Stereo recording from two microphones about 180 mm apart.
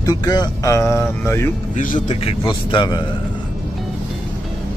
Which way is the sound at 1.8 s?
45° left (ahead or behind).